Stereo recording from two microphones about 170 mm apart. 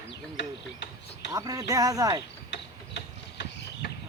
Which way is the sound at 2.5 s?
85° left.